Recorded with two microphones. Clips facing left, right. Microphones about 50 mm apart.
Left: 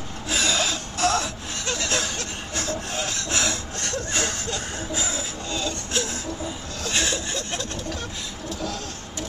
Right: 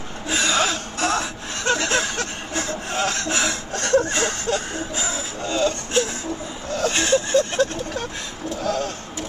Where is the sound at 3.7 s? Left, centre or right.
Right.